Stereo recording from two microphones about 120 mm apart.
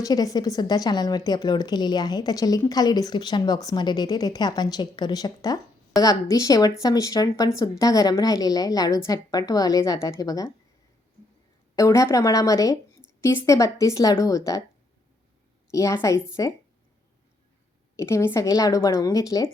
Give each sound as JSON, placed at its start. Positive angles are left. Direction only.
{"t": 0.0, "sound": "a woman's voice", "side_deg": 30}
{"t": 11.8, "sound": "a woman's voice", "side_deg": 25}
{"t": 15.7, "sound": "a woman's voice", "side_deg": 25}
{"t": 17.9, "sound": "a woman's voice", "side_deg": 25}